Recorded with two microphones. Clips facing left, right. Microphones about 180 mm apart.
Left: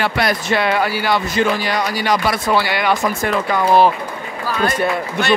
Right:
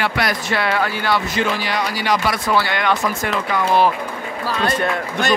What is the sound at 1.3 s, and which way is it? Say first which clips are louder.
Speech: left 3 dB; 45° left (ahead or behind).